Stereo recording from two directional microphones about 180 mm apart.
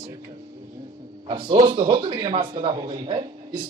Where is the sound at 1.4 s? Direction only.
30° right (ahead or behind).